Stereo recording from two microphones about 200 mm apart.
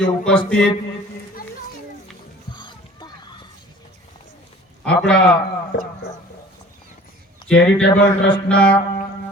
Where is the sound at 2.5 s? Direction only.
20° left (ahead or behind).